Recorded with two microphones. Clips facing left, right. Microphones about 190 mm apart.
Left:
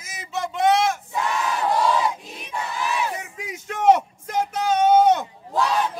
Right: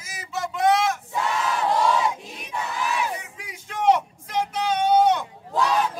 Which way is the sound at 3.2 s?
45° left (ahead or behind).